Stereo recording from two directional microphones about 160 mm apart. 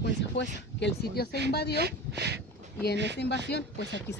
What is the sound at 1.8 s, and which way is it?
Speech, 90° right.